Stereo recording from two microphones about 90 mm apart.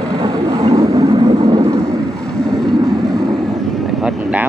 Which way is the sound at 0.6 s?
40° right (ahead or behind).